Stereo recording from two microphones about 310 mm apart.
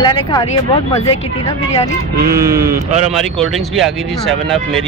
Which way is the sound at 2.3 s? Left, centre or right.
Centre.